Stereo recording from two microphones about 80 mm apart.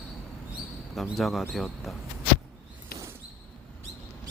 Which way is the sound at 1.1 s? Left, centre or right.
Centre.